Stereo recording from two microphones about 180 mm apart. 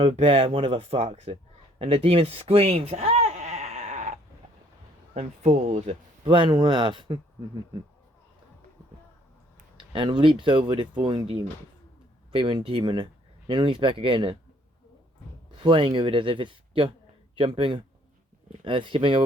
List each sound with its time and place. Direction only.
0.0 s speech: 30° right (ahead or behind)
1.8 s a sound: 30° right (ahead or behind)
5.1 s speech: 40° right (ahead or behind)
9.7 s speech: 25° right (ahead or behind)
15.5 s speech: 30° right (ahead or behind)